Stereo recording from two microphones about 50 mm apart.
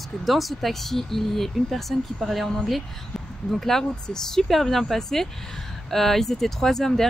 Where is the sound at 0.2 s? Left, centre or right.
Centre.